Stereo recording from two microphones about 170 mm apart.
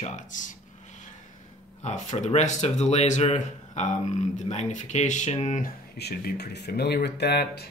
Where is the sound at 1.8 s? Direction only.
45° left (ahead or behind).